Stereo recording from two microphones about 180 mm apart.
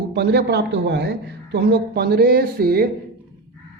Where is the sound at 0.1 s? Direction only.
70° right (ahead or behind).